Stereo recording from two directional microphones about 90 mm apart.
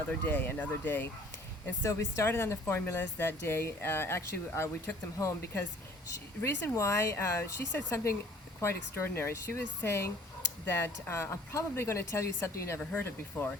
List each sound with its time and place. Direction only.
0.1 s speech: 20° left (ahead or behind)
1.8 s speech: 35° left (ahead or behind)
6.7 s speech: 35° left (ahead or behind)
12.8 s speech: 15° left (ahead or behind)
13.1 s speech: 25° left (ahead or behind)